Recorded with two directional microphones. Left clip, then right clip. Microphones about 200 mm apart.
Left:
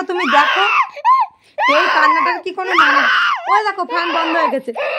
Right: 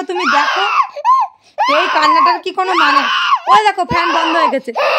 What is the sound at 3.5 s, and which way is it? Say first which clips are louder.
Speech: right 5 dB; 35° right (ahead or behind).